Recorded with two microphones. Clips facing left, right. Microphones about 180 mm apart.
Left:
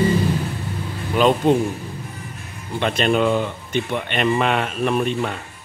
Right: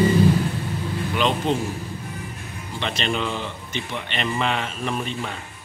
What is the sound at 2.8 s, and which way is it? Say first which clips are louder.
Speech: left 8 dB; 50° left (ahead or behind).